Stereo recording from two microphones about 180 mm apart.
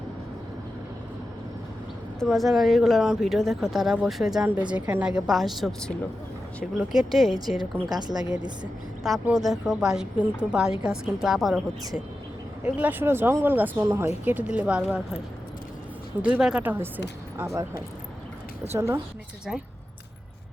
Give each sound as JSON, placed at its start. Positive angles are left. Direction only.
{"t": 2.1, "sound": "speech", "side_deg": 0}
{"t": 7.6, "sound": "a woman's voice", "side_deg": -20}
{"t": 9.0, "sound": "speech", "side_deg": 0}
{"t": 12.6, "sound": "speech", "side_deg": -10}
{"t": 16.2, "sound": "speech", "side_deg": -5}
{"t": 18.7, "sound": "speech", "side_deg": -15}